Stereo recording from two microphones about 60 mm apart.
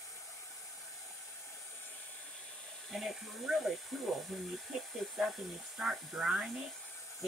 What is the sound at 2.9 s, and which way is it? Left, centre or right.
Speech, centre.